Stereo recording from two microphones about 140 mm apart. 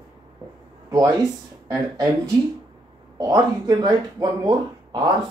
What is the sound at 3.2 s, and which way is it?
Speech, 25° right (ahead or behind).